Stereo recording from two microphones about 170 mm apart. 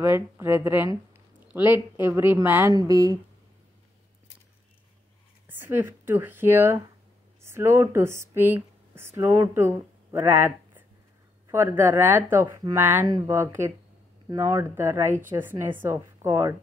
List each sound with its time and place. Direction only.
0.0 s speech: 15° right (ahead or behind)
2.7 s speech: 20° right (ahead or behind)
5.5 s a woman's voice: 10° right (ahead or behind)